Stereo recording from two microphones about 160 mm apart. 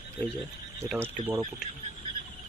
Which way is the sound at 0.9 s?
15° right (ahead or behind).